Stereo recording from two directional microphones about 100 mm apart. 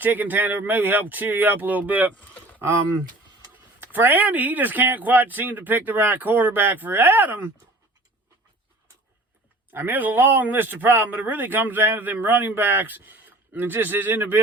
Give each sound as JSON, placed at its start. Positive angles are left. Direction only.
{"t": 0.0, "sound": "speech", "side_deg": -20}
{"t": 3.8, "sound": "speech", "side_deg": -20}
{"t": 9.7, "sound": "speech", "side_deg": -20}